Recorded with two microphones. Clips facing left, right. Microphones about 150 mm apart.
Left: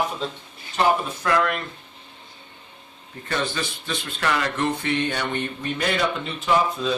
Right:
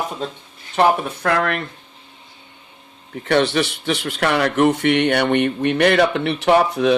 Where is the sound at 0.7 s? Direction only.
65° right (ahead or behind).